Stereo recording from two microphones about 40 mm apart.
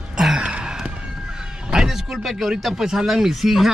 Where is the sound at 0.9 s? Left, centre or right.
Right.